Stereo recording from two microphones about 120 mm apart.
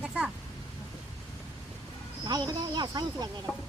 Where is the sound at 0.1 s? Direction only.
10° right (ahead or behind).